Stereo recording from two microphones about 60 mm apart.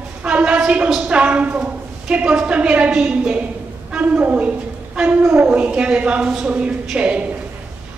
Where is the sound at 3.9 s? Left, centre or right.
Right.